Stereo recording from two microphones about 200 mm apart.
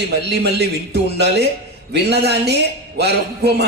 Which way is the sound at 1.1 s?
55° right (ahead or behind).